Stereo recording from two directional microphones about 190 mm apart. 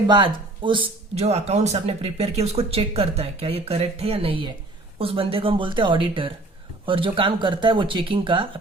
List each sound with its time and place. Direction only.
0.1 s speech: 25° right (ahead or behind)